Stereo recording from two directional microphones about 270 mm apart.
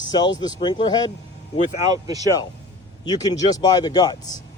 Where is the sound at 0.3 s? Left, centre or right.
Centre.